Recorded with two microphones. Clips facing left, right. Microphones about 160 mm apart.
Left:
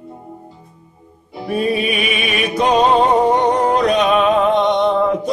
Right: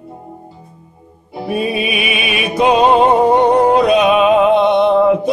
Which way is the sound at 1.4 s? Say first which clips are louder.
Even; 10° right (ahead or behind).